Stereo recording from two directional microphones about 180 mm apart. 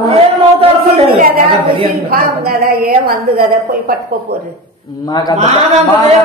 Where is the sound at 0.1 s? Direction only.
35° right (ahead or behind).